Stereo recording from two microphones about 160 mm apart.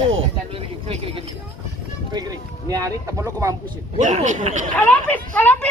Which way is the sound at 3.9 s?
50° right (ahead or behind).